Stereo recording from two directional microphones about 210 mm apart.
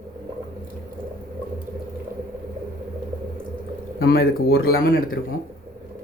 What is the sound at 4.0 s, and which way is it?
Speech, 45° left (ahead or behind).